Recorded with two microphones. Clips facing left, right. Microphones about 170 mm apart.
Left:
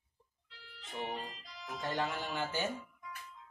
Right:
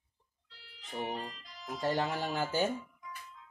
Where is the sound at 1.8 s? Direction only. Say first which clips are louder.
Right 5 dB; 40° right (ahead or behind).